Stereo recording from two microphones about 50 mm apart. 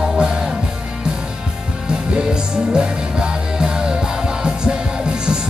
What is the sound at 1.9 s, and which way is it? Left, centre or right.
Music, centre.